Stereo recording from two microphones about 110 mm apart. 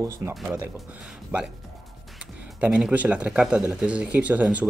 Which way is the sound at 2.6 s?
10° right (ahead or behind).